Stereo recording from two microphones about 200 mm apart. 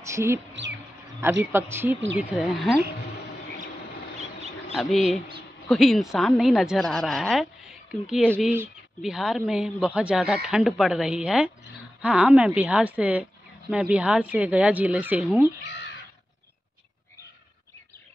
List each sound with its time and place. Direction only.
0.0 s speech: 15° right (ahead or behind)
0.5 s speech: 65° right (ahead or behind)
1.4 s a woman's voice: 10° right (ahead or behind)
4.7 s a woman's voice: centre (ahead or behind)